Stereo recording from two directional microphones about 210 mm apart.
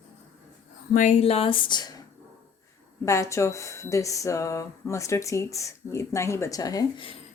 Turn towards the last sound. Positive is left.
turn(degrees=20)  # may be behind; listen again after turning